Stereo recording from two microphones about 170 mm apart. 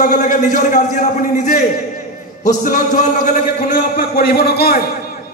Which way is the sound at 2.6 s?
50° left (ahead or behind).